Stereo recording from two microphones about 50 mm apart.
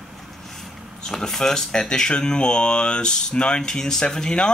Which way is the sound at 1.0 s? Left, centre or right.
Centre.